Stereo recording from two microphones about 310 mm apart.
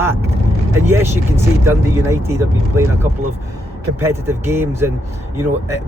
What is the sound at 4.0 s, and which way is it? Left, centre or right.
Speech, centre.